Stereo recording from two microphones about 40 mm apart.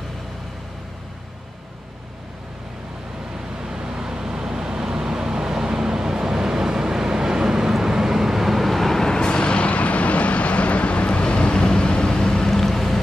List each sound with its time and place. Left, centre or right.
3.6 s vehicle: centre
9.1 s vehicle: left